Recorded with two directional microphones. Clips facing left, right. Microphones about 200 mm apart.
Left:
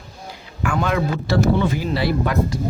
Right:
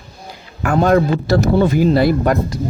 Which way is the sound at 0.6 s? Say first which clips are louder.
Right 7 dB; 40° right (ahead or behind).